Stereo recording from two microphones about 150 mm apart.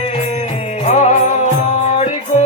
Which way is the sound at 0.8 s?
45° left (ahead or behind).